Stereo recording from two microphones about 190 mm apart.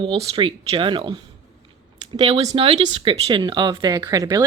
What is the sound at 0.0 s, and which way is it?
Speech, 25° right (ahead or behind).